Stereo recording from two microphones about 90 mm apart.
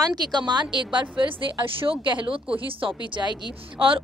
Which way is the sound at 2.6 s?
75° right (ahead or behind).